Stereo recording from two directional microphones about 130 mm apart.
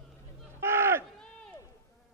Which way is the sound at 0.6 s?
20° right (ahead or behind).